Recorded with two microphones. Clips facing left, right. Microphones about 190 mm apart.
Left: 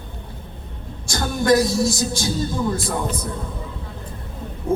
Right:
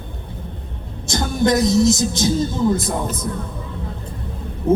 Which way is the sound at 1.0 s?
20° right (ahead or behind).